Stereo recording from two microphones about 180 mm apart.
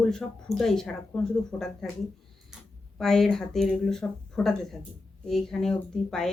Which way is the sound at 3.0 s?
Centre (ahead or behind).